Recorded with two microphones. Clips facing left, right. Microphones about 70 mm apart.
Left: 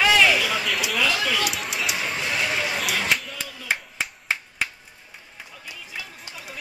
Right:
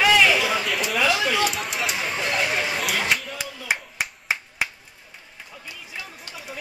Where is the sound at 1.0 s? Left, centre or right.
Centre.